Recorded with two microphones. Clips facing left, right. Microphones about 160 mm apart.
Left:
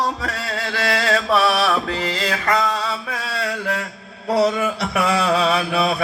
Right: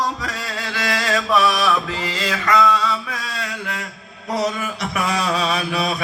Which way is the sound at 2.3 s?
35° left (ahead or behind).